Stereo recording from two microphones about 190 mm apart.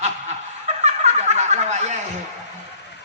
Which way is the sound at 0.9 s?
35° right (ahead or behind).